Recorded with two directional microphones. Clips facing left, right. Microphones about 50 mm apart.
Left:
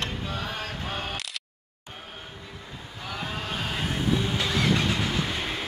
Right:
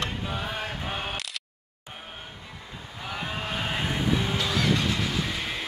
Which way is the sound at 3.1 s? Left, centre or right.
Centre.